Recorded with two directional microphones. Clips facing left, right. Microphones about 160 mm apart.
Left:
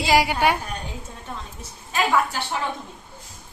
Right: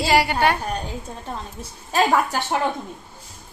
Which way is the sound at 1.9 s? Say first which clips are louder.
Right 3 dB; 40° right (ahead or behind).